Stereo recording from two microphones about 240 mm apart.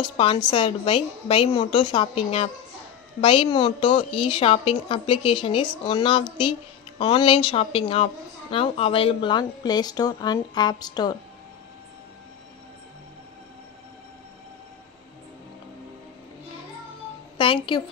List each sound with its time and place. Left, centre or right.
0.0 s a woman's voice: left
17.4 s a woman's voice: left